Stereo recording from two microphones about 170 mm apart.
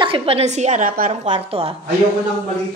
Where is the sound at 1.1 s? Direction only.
40° right (ahead or behind).